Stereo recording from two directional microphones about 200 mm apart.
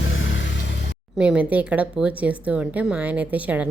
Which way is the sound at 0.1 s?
70° left (ahead or behind).